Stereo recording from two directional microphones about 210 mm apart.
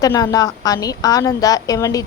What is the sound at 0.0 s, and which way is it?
A woman's voice, 15° left (ahead or behind).